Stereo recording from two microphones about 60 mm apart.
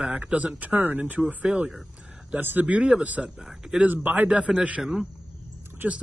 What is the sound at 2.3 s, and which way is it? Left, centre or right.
Speech, right.